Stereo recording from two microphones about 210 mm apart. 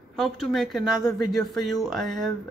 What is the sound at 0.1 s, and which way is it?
A man's voice, centre (ahead or behind).